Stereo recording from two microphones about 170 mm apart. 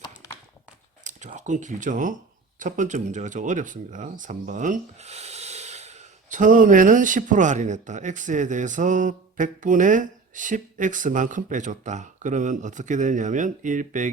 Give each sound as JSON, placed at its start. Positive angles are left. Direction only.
{"t": 1.0, "sound": "speech", "side_deg": -45}